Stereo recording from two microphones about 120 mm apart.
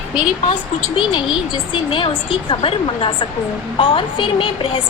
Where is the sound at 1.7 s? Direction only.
45° left (ahead or behind).